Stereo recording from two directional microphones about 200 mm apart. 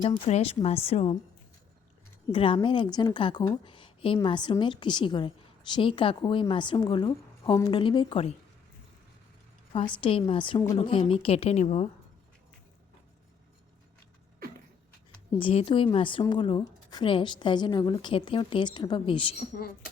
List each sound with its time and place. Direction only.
0.0 s a woman's voice: 30° left (ahead or behind)
2.3 s a woman's voice: 25° left (ahead or behind)
10.0 s a woman's voice: 25° left (ahead or behind)
15.3 s a woman's voice: 25° left (ahead or behind)